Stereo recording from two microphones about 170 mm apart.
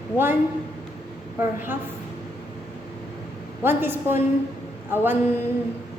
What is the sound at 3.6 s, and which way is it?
A woman's voice, 10° right (ahead or behind).